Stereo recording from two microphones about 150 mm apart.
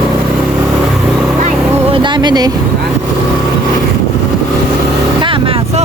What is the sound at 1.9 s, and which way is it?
Vehicle, 30° right (ahead or behind).